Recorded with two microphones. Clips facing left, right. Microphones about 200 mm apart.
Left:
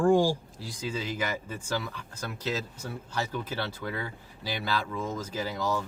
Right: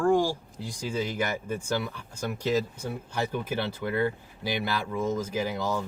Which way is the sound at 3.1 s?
15° right (ahead or behind).